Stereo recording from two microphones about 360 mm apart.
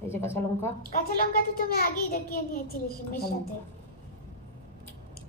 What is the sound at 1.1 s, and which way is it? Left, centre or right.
A child's voice, left.